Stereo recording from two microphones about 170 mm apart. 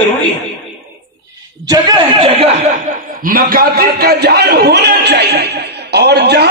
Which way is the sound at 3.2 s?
60° right (ahead or behind).